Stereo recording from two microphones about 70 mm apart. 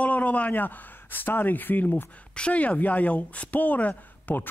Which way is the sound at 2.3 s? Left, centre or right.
Centre.